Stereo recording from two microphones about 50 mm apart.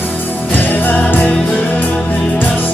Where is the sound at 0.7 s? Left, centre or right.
Left.